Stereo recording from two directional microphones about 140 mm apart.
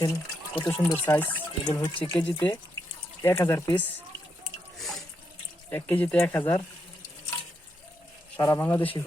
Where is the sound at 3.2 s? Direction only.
20° left (ahead or behind).